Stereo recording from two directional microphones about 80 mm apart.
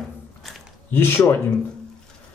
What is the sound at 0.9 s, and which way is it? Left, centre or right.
Speech, left.